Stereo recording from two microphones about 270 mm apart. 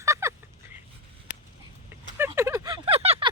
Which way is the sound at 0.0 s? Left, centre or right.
Centre.